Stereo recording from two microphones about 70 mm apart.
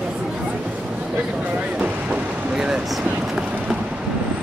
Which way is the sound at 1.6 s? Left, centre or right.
Centre.